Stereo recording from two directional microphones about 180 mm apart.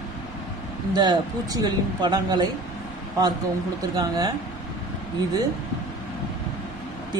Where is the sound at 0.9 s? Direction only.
20° right (ahead or behind).